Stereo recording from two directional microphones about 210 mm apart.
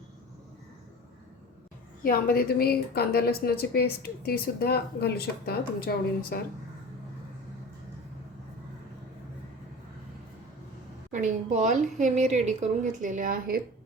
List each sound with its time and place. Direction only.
2.0 s speech: 45° left (ahead or behind)
11.1 s a woman's voice: 35° right (ahead or behind)